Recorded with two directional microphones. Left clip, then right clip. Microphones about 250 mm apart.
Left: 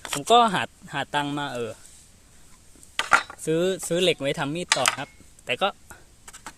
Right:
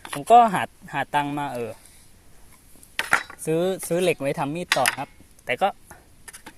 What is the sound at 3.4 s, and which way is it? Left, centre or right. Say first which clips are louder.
Speech: even; centre.